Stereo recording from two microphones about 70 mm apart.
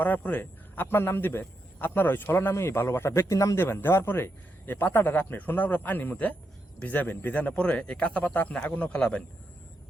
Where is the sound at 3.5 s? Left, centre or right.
Left; by 9.2 s centre.